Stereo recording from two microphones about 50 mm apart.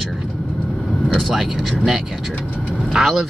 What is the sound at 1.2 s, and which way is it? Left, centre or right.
Speech, centre.